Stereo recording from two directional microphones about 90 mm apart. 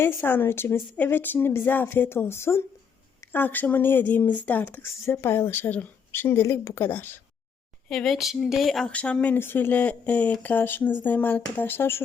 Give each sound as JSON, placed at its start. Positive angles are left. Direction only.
{"t": 0.0, "sound": "a woman's voice", "side_deg": 25}
{"t": 5.0, "sound": "a woman's voice", "side_deg": 30}
{"t": 7.9, "sound": "speech", "side_deg": 5}
{"t": 8.9, "sound": "a woman's voice", "side_deg": 15}